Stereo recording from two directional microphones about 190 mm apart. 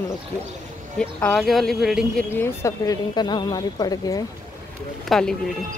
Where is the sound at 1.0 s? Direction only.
5° left (ahead or behind).